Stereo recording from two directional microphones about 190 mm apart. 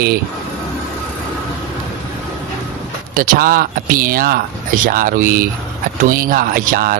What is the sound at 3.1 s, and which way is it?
A man's voice, 45° right (ahead or behind).